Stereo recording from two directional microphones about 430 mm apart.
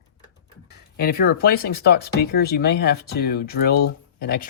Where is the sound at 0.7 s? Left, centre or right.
Left.